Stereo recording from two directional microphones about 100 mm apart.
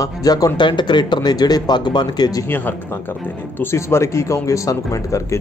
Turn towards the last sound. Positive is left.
turn(degrees=35)  # may be behind; listen again after turning